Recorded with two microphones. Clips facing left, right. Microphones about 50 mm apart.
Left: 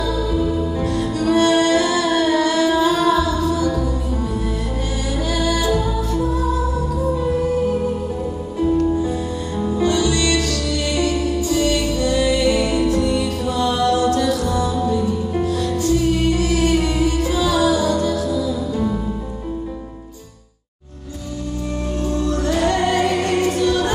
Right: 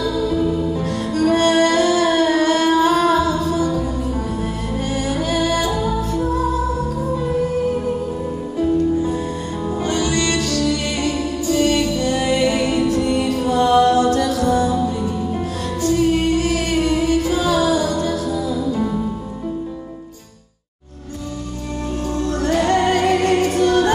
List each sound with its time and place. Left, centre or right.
1.1 s music: right
5.1 s music: right
9.8 s music: right
22.2 s music: right